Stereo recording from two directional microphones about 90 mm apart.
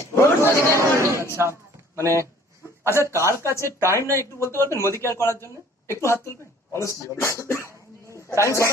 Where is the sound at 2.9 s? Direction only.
30° left (ahead or behind).